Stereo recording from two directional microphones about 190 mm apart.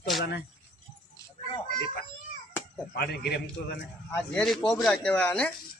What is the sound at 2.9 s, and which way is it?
Speech, 55° left (ahead or behind).